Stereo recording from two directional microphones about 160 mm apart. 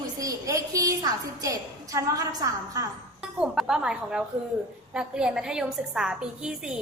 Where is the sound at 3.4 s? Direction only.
5° right (ahead or behind).